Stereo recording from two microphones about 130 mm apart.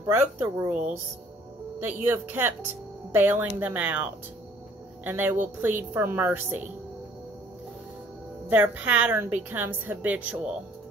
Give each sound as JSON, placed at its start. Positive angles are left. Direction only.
{"t": 0.0, "sound": "speech", "side_deg": -20}
{"t": 2.0, "sound": "speech", "side_deg": -15}
{"t": 8.5, "sound": "speech", "side_deg": -10}